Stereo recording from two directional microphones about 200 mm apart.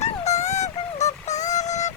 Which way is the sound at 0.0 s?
35° left (ahead or behind).